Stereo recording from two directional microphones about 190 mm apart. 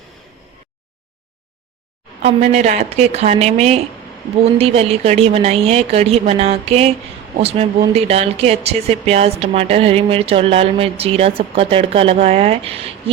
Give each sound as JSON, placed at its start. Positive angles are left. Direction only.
{"t": 2.2, "sound": "speech", "side_deg": -35}